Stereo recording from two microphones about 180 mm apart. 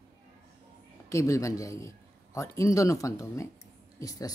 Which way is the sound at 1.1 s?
15° left (ahead or behind).